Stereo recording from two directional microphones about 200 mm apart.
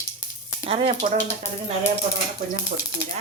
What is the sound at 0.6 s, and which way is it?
Speech, 30° right (ahead or behind).